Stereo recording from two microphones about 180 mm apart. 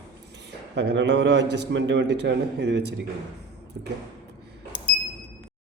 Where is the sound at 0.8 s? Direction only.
75° right (ahead or behind).